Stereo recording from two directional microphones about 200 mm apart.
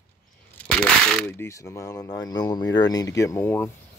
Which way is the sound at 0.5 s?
5° left (ahead or behind).